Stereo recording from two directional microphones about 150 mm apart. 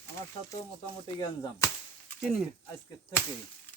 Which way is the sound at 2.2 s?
Centre (ahead or behind).